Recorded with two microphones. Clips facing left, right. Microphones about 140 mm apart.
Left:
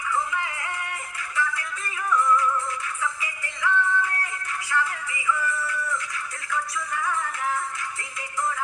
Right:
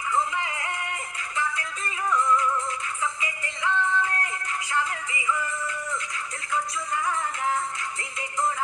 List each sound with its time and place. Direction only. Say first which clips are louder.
0.1 s music: right 1 dB; 20° right (ahead or behind)